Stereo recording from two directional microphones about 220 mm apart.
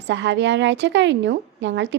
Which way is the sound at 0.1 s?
55° right (ahead or behind).